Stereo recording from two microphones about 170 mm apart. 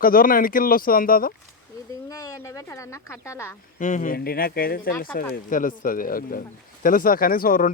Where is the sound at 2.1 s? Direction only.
20° left (ahead or behind).